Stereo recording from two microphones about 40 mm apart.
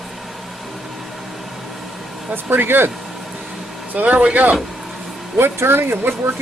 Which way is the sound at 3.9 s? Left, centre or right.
Right.